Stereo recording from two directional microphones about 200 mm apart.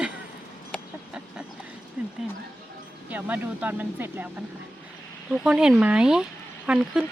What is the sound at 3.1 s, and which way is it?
Speech, 10° right (ahead or behind).